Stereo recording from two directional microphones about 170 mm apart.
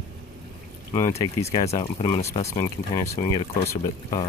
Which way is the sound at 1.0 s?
15° left (ahead or behind).